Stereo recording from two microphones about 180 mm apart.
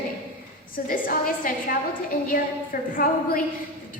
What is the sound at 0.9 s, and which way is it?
Speech, 50° left (ahead or behind).